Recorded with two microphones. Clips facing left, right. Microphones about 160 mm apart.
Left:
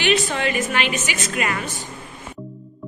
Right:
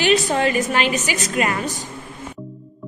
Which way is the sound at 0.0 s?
40° right (ahead or behind).